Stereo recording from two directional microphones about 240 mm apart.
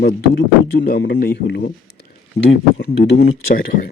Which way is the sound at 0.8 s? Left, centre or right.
Left.